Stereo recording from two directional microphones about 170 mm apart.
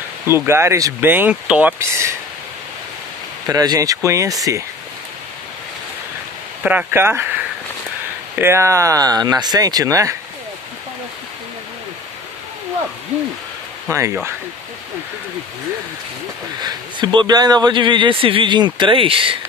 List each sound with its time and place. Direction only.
0.5 s speech: 15° right (ahead or behind)
3.4 s a man's voice: 20° right (ahead or behind)
6.6 s a man's voice: 10° right (ahead or behind)
13.8 s speech: 15° right (ahead or behind)
16.6 s a man's voice: 25° right (ahead or behind)